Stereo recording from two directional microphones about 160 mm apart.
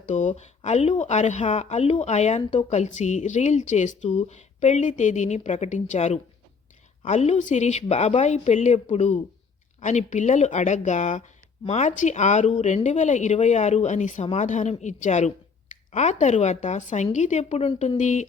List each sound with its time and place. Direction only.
0.1 s a woman's voice: 50° left (ahead or behind)